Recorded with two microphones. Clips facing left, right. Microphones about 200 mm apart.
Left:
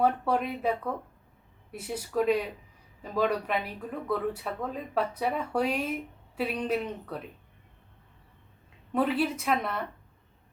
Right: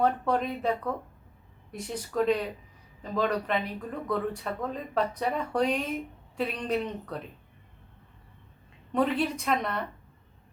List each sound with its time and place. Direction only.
0.0 s speech: 10° left (ahead or behind)
8.9 s a woman's voice: 5° left (ahead or behind)